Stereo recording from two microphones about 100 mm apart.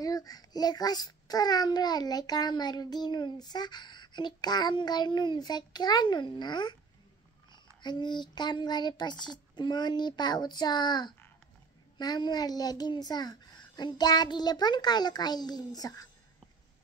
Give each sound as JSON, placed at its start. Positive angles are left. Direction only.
{"t": 0.0, "sound": "a child's voice", "side_deg": 40}
{"t": 7.8, "sound": "a child's voice", "side_deg": 50}